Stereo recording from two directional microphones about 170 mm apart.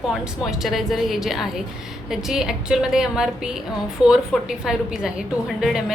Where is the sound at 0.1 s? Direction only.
Centre (ahead or behind).